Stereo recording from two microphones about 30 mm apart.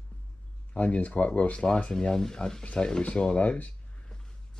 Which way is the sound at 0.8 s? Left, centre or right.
Left.